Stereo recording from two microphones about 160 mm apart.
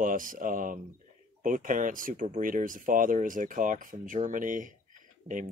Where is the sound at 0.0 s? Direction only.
60° right (ahead or behind).